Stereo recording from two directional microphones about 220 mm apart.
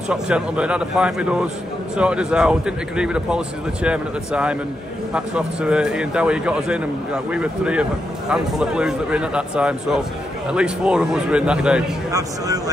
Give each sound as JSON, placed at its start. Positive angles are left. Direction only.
{"t": 0.1, "sound": "speech", "side_deg": -5}
{"t": 12.1, "sound": "speech", "side_deg": -15}